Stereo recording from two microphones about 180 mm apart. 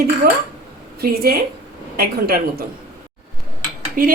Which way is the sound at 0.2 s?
60° right (ahead or behind).